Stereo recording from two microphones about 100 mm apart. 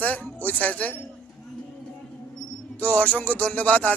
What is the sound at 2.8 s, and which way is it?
Speech, 15° left (ahead or behind).